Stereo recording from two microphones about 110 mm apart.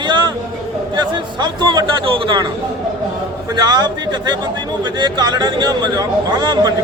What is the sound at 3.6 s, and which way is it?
Speech, 40° right (ahead or behind).